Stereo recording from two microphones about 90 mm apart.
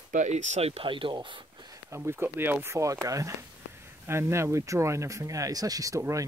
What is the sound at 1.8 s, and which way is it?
Speech, 30° right (ahead or behind).